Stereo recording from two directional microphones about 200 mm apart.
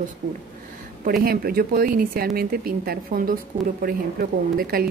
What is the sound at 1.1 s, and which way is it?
Speech, 50° right (ahead or behind).